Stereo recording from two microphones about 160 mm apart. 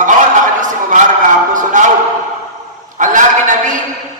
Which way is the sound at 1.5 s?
55° right (ahead or behind).